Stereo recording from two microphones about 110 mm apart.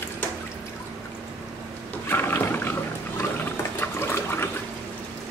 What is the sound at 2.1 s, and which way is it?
Wild animals, 20° left (ahead or behind).